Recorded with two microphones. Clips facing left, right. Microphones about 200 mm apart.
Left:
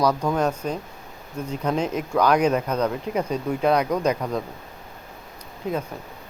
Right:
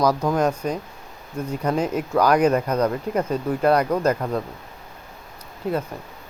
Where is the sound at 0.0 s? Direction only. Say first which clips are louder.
Right 2 dB; 5° right (ahead or behind).